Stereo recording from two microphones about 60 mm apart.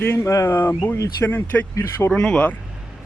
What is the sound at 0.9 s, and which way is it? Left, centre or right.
Speech, left.